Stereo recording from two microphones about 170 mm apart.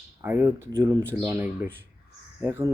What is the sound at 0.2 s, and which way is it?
Speech, 15° right (ahead or behind).